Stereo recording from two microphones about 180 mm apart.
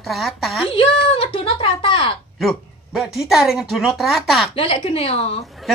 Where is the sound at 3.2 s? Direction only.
Centre (ahead or behind).